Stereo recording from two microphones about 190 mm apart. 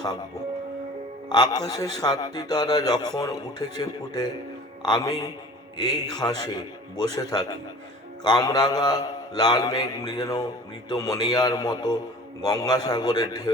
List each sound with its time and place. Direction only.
1.3 s mantra: 20° left (ahead or behind)